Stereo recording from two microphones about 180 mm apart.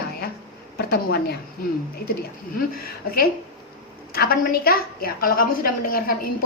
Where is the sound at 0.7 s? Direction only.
60° left (ahead or behind).